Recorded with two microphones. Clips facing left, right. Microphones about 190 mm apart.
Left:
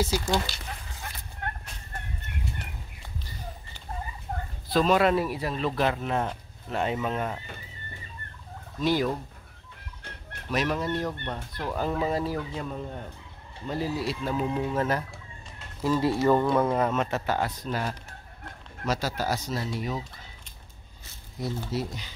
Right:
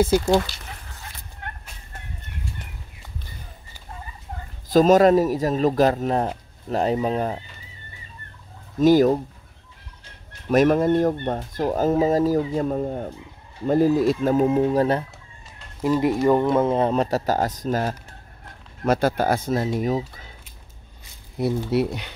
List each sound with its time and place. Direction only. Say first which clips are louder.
0.0 s speech: right 8 dB; 55° right (ahead or behind)
4.7 s speech: right 8 dB; 40° right (ahead or behind)
8.7 s speech: right 10 dB; 45° right (ahead or behind)
10.5 s speech: right 11 dB; 50° right (ahead or behind); by 15.1 s 30° right (ahead or behind)
15.8 s speech: right 4 dB; 20° right (ahead or behind); by 17.9 s 45° right (ahead or behind)
18.9 s speech: right 9 dB; 55° right (ahead or behind)
21.4 s speech: right 9 dB; 65° right (ahead or behind)